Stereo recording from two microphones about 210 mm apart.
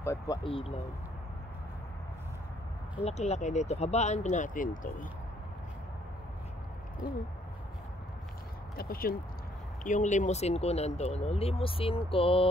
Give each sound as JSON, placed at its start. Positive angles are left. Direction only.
{"t": 0.0, "sound": "speech", "side_deg": 15}
{"t": 0.4, "sound": "speech", "side_deg": 25}
{"t": 3.0, "sound": "speech", "side_deg": 30}
{"t": 8.7, "sound": "speech", "side_deg": 45}